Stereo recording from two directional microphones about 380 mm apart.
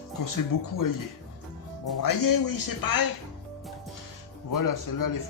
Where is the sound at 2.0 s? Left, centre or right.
Left.